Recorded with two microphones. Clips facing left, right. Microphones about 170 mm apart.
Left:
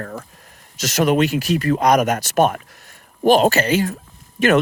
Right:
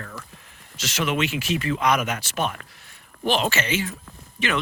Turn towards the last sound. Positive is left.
turn(degrees=45)  # may be behind; listen again after turning